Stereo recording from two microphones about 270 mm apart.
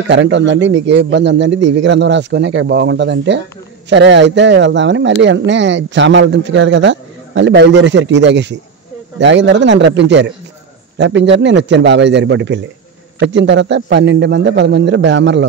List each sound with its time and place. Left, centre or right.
0.1 s speech: right